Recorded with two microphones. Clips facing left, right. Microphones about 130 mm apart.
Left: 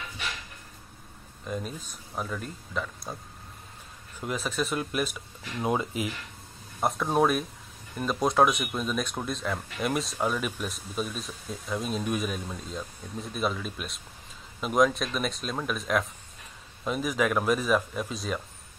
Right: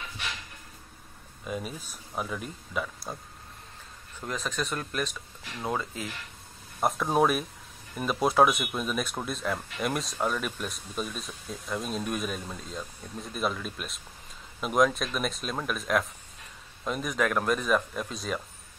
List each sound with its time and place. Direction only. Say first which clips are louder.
1.4 s speech: even; 5° right (ahead or behind)
4.2 s speech: left 2 dB; 10° left (ahead or behind)
6.8 s speech: even; centre (ahead or behind)